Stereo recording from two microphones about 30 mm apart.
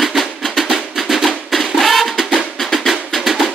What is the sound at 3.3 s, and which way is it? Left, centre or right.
Percussion, centre.